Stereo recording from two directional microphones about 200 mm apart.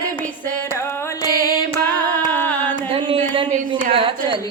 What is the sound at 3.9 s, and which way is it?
Carnatic music, 25° right (ahead or behind).